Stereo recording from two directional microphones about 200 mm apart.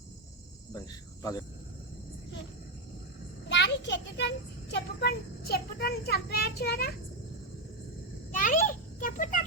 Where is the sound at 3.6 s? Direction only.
60° left (ahead or behind).